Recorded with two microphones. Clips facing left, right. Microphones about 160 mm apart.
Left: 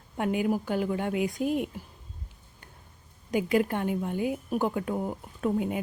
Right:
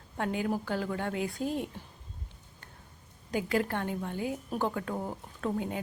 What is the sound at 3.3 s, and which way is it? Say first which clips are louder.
A woman's voice: left 4 dB; 15° left (ahead or behind).